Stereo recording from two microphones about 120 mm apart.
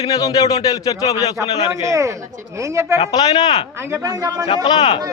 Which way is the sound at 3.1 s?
35° left (ahead or behind).